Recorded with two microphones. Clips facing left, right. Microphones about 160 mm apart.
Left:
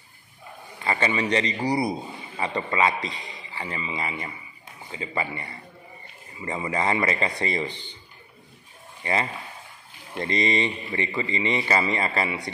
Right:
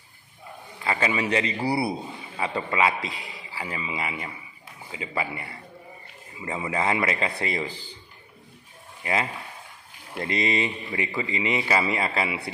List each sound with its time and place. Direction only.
0.8 s a man's voice: 5° right (ahead or behind)
9.0 s a man's voice: 5° right (ahead or behind)